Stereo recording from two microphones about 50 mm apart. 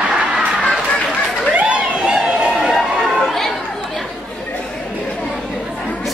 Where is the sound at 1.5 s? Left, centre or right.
Right.